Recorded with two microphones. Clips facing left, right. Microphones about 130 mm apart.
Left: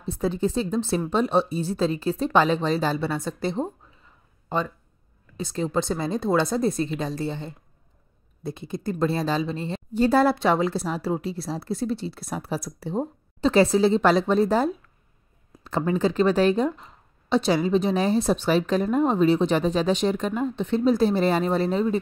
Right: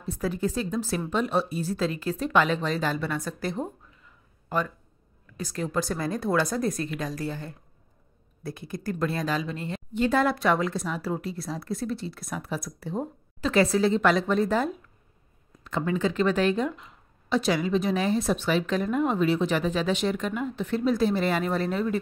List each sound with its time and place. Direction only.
0.0 s speech: 25° left (ahead or behind)